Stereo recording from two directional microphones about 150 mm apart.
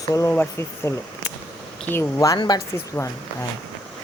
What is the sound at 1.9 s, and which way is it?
Speech, 20° left (ahead or behind).